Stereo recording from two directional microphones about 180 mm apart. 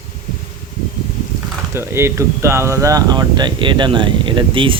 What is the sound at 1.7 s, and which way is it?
Speech, 15° right (ahead or behind).